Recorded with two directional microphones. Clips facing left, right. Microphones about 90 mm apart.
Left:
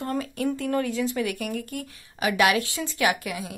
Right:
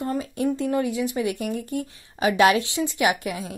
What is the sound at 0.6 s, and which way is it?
Speech, 15° right (ahead or behind).